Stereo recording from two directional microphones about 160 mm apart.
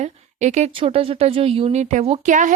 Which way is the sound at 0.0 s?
45° right (ahead or behind).